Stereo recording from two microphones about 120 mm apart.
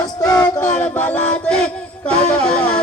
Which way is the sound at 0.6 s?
15° left (ahead or behind).